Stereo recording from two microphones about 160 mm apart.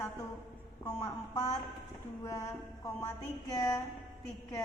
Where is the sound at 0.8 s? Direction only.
20° left (ahead or behind).